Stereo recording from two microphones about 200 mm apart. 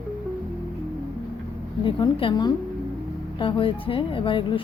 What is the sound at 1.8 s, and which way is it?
A woman's voice, 25° left (ahead or behind).